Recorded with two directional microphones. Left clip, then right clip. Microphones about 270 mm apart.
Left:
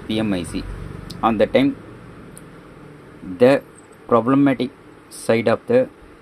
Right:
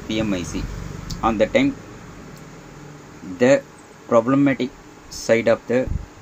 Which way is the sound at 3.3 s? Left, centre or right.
Centre.